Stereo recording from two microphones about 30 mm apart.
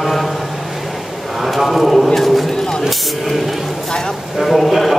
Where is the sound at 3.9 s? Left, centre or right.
Left.